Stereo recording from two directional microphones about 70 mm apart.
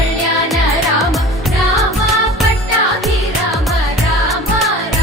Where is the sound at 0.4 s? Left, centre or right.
Centre.